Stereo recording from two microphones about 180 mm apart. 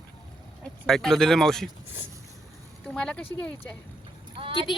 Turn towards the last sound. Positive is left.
turn(degrees=-30)  # may be behind; listen again after turning